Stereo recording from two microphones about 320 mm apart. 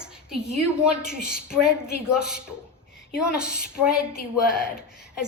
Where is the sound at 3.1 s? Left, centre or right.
Centre.